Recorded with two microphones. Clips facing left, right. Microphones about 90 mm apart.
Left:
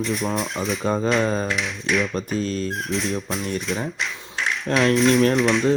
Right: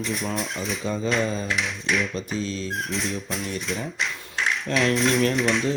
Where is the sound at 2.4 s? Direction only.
50° left (ahead or behind).